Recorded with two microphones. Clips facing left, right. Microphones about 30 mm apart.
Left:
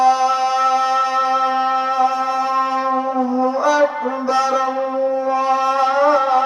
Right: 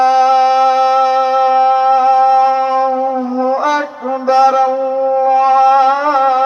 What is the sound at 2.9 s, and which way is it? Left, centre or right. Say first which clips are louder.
Music: right 3 dB; right.